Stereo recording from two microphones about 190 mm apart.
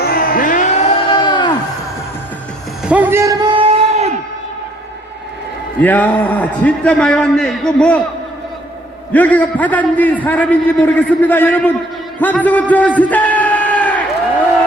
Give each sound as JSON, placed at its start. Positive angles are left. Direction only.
{"t": 0.0, "sound": "music", "side_deg": 50}
{"t": 2.8, "sound": "music", "side_deg": -10}
{"t": 5.8, "sound": "a man's voice", "side_deg": 10}
{"t": 9.1, "sound": "a man's voice", "side_deg": 5}
{"t": 13.0, "sound": "a sound", "side_deg": 10}